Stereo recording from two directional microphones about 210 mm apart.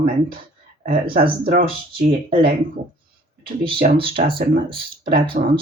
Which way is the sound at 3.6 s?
25° right (ahead or behind).